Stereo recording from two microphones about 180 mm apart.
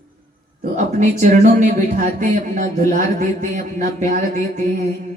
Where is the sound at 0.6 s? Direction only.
40° right (ahead or behind).